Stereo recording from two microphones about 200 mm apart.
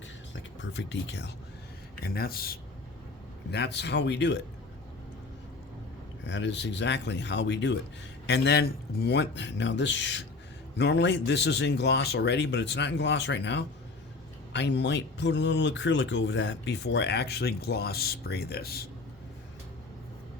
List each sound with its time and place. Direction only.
0.6 s speech: 65° left (ahead or behind)
2.0 s speech: 50° left (ahead or behind)
6.2 s speech: 60° left (ahead or behind)